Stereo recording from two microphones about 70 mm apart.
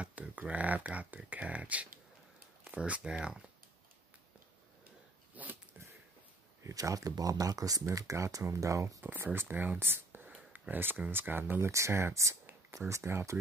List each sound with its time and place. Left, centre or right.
0.0 s speech: centre
5.3 s a sound: right
6.6 s speech: right
9.0 s speech: right
11.6 s speech: right